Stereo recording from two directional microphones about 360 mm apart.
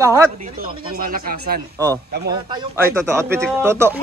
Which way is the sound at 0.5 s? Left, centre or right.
Right.